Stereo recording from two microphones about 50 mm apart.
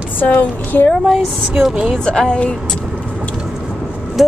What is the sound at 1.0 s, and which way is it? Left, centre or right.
Vehicle, centre.